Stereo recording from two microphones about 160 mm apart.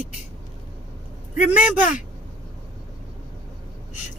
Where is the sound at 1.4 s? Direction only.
10° right (ahead or behind).